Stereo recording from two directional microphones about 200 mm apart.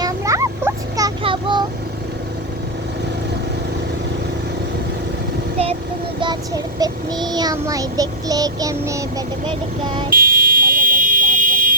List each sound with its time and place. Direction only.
0.0 s a sound: 15° right (ahead or behind)
6.1 s child singing: 20° right (ahead or behind)
10.1 s vehicle: 45° right (ahead or behind)